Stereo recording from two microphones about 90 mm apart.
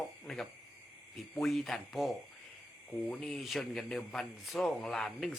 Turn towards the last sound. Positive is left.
turn(degrees=5)  # may be behind; listen again after turning